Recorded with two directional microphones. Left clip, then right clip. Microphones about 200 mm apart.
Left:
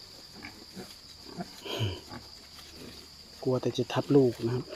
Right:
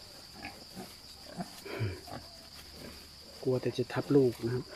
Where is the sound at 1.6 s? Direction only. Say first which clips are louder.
Left 6 dB; 15° left (ahead or behind).